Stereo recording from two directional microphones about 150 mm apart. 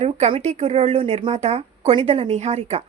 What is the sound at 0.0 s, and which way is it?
Speech, 40° right (ahead or behind).